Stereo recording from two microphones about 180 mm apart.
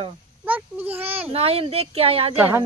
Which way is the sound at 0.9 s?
35° right (ahead or behind).